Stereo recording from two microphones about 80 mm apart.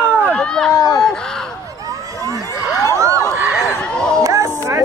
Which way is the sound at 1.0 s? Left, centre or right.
Centre.